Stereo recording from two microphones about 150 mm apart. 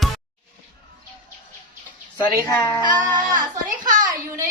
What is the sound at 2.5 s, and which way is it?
Speech, 20° left (ahead or behind).